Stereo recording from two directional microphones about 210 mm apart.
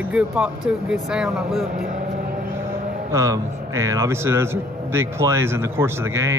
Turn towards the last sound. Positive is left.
turn(degrees=-10)  # may be behind; listen again after turning